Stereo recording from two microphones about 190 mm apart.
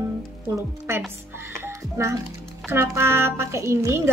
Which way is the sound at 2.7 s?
10° right (ahead or behind).